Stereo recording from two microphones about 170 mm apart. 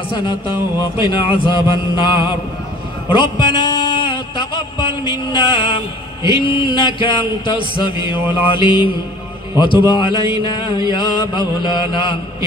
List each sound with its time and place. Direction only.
0.9 s chant: 30° left (ahead or behind)
3.1 s a sound: 25° left (ahead or behind)
6.2 s chant: 30° left (ahead or behind)
9.8 s chant: 25° left (ahead or behind)